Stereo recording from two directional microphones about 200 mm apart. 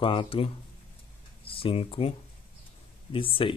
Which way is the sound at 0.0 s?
25° left (ahead or behind).